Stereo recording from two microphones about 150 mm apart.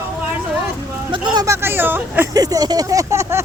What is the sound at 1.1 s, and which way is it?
Speech, 30° right (ahead or behind).